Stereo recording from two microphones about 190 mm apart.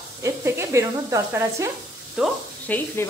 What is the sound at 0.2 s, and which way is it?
Speech, 15° right (ahead or behind).